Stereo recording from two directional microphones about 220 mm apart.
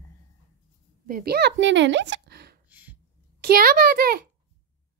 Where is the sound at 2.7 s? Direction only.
5° right (ahead or behind).